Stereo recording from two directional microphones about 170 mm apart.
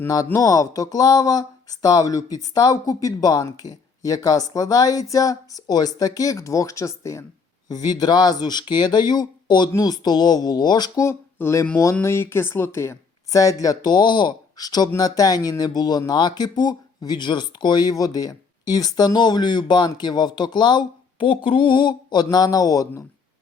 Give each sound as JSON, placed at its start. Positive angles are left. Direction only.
{"t": 0.0, "sound": "speech", "side_deg": 15}